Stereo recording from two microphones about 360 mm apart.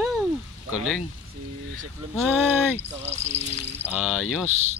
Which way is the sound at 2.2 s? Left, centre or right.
Centre.